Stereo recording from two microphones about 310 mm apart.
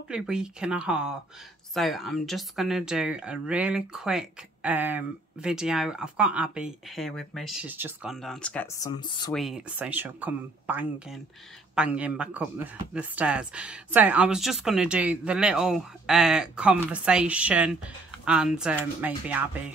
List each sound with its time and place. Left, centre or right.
0.1 s speech: centre
9.3 s speech: centre